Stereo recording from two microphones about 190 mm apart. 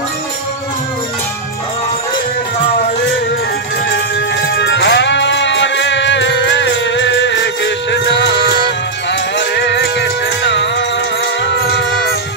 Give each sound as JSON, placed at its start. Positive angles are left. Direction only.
{"t": 3.9, "sound": "music", "side_deg": 65}